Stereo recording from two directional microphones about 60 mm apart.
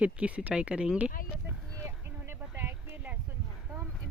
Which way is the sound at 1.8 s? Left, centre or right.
Right.